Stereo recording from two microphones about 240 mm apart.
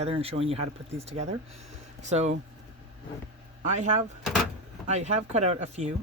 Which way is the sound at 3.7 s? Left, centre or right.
Right.